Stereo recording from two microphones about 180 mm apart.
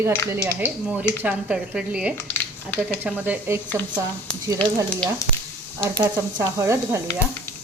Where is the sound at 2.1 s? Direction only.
10° left (ahead or behind).